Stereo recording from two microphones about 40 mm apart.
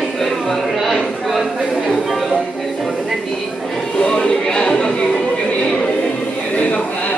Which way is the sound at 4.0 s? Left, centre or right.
Centre.